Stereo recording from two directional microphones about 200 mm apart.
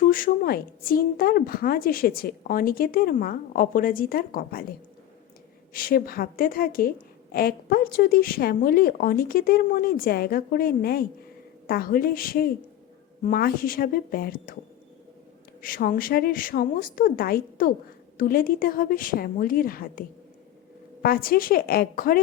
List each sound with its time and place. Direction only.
0.1 s a woman's voice: 45° left (ahead or behind)
5.7 s a woman's voice: 45° left (ahead or behind)
15.6 s a woman's voice: 45° left (ahead or behind)